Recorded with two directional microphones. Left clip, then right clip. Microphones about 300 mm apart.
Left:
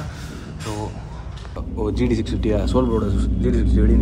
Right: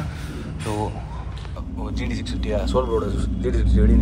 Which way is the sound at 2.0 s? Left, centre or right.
Centre.